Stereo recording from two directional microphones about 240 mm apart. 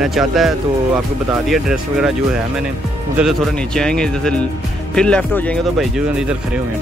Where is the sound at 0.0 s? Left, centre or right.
Centre.